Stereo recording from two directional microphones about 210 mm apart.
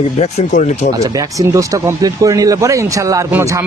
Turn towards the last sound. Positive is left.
turn(degrees=-15)  # may be behind; listen again after turning